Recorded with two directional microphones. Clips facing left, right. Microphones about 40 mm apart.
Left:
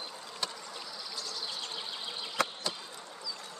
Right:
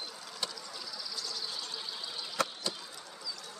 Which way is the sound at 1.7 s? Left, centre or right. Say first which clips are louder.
Left 1 dB; left.